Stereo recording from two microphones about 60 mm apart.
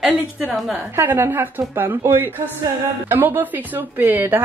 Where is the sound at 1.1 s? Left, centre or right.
Right.